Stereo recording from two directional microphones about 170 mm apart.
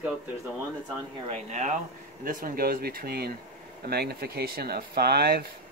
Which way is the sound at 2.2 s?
55° right (ahead or behind).